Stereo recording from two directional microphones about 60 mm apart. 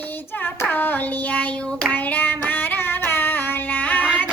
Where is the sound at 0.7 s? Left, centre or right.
Left.